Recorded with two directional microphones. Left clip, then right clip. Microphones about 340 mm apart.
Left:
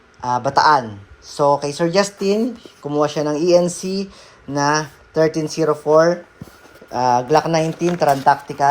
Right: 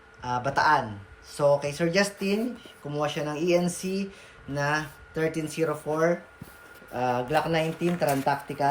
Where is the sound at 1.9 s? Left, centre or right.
Left.